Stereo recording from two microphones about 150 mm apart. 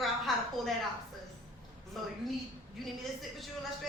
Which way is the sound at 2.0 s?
Centre (ahead or behind).